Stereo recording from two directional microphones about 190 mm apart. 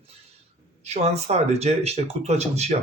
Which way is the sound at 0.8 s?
35° right (ahead or behind).